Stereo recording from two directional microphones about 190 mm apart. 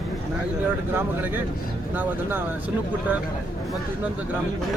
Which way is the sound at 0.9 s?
10° right (ahead or behind).